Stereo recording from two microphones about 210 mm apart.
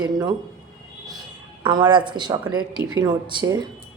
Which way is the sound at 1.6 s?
20° right (ahead or behind).